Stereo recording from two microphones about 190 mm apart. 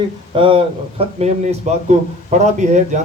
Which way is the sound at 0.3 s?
25° right (ahead or behind).